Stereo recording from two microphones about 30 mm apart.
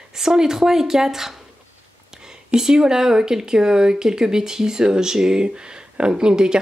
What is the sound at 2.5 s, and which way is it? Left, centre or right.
Speech, right.